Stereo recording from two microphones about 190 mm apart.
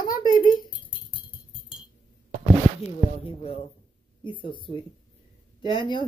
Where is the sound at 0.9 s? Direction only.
25° left (ahead or behind).